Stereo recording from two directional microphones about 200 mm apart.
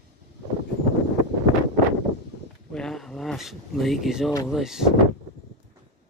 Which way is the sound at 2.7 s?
Centre (ahead or behind).